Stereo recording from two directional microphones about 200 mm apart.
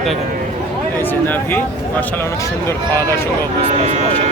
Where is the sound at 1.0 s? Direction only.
10° left (ahead or behind).